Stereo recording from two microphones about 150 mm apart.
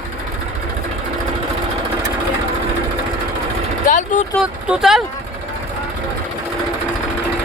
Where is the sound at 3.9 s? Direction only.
55° left (ahead or behind).